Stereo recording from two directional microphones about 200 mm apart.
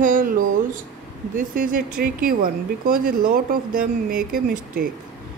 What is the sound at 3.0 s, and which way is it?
Speech, 45° right (ahead or behind).